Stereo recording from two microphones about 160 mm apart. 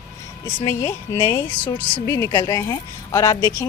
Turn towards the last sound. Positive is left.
turn(degrees=20)  # may be behind; listen again after turning